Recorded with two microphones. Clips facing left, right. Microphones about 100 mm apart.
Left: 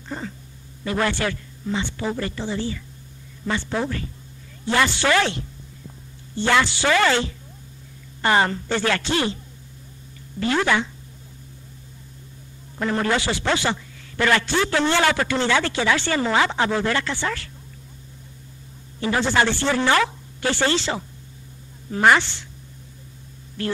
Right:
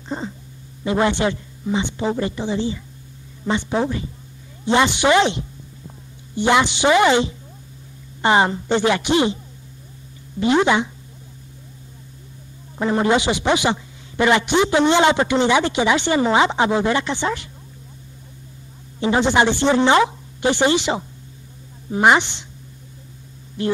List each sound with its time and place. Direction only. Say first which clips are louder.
0.1 s a sound: right 4 dB; 20° right (ahead or behind)
0.8 s a man's voice: right 5 dB; 20° right (ahead or behind)
10.4 s a man's voice: right 4 dB; 20° right (ahead or behind)
12.7 s a man's voice: right 4 dB; 20° right (ahead or behind)
18.9 s a man's voice: right 4 dB; 20° right (ahead or behind)
23.6 s speech: right 5 dB; 20° right (ahead or behind)